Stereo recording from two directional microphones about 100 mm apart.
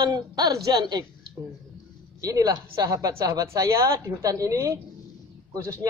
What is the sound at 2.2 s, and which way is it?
Speech, 35° right (ahead or behind).